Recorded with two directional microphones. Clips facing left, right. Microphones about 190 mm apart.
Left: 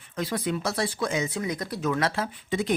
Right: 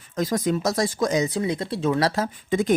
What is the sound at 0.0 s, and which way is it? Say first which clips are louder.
Speech: right 5 dB; 40° right (ahead or behind).